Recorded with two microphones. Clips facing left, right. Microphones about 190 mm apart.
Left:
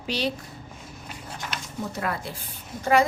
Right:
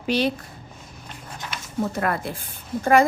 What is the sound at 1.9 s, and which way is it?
A woman's voice, 55° right (ahead or behind).